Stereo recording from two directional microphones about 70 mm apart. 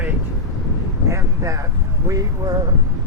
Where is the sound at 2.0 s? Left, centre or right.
Right.